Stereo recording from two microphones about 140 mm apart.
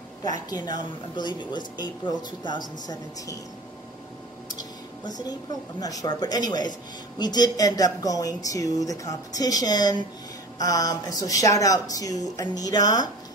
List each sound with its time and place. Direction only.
0.5 s a woman's voice: 30° left (ahead or behind)
5.8 s a woman's voice: 25° left (ahead or behind)